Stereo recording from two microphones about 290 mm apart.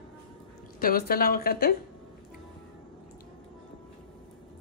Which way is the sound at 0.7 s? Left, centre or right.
Left.